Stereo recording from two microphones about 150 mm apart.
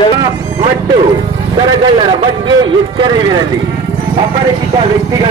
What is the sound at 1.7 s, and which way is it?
A man's voice, 30° right (ahead or behind).